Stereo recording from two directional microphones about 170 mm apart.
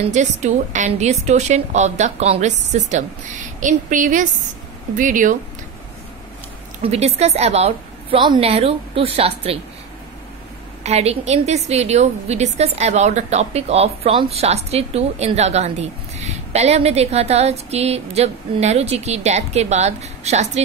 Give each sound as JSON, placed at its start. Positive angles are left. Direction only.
{"t": 0.1, "sound": "a woman's voice", "side_deg": -45}
{"t": 6.8, "sound": "a woman's voice", "side_deg": -35}
{"t": 10.8, "sound": "a woman's voice", "side_deg": -40}